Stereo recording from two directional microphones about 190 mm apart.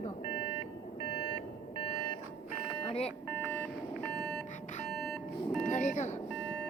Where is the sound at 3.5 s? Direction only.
10° left (ahead or behind).